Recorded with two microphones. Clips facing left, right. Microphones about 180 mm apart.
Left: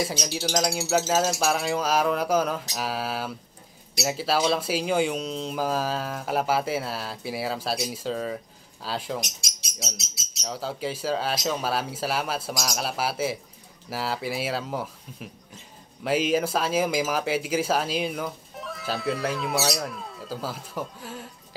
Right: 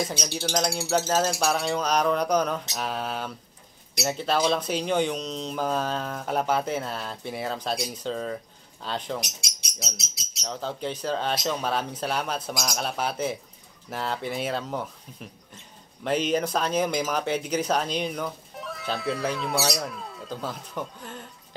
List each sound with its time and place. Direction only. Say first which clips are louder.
0.0 s speech: left 1 dB; 5° left (ahead or behind)
10.4 s speech: left 1 dB; 5° left (ahead or behind)